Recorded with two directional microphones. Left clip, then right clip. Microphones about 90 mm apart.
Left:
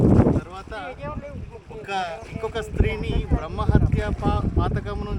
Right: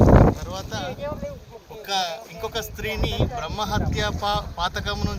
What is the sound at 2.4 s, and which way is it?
Speech, 20° left (ahead or behind).